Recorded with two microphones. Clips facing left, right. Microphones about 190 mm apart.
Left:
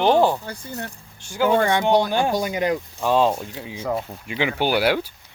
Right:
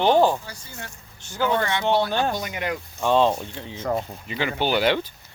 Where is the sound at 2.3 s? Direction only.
30° left (ahead or behind).